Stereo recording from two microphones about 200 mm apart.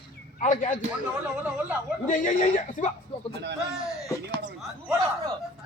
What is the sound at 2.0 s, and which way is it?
Speech, 40° left (ahead or behind).